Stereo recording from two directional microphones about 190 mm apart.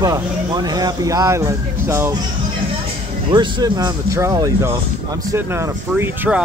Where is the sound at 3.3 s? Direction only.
25° right (ahead or behind).